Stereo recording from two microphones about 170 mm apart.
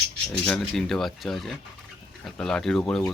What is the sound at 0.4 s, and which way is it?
Speech, 5° left (ahead or behind).